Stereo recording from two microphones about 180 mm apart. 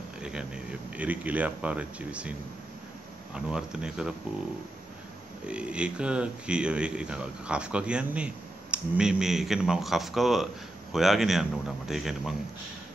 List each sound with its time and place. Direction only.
0.2 s speech: 5° right (ahead or behind)
3.3 s speech: 5° right (ahead or behind)
5.5 s speech: 5° right (ahead or behind)